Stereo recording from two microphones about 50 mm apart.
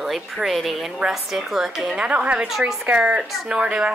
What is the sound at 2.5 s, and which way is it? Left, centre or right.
Speech, centre.